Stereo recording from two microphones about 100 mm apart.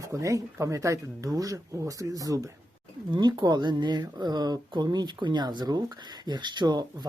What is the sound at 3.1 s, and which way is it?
Speech, 50° right (ahead or behind).